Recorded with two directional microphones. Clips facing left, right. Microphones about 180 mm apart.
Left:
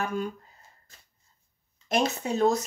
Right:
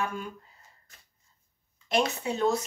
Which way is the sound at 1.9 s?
40° left (ahead or behind).